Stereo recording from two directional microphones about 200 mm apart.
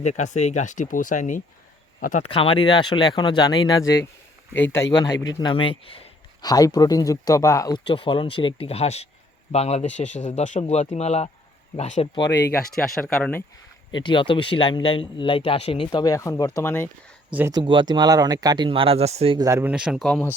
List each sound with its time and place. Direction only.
0.0 s speech: 35° left (ahead or behind)
2.2 s speech: 25° left (ahead or behind)
12.7 s speech: centre (ahead or behind)
13.9 s speech: 25° left (ahead or behind)
17.5 s speech: 25° right (ahead or behind)
19.5 s speech: 10° right (ahead or behind)